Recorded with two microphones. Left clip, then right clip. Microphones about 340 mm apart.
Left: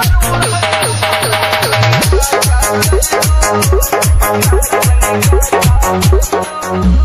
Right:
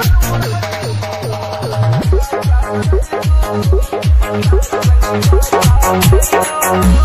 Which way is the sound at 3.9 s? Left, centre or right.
Left.